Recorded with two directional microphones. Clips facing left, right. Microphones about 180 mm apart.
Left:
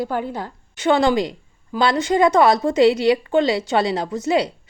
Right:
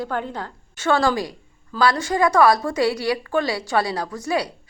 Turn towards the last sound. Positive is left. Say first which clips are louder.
# left 4 dB
turn(degrees=20)  # may be behind; listen again after turning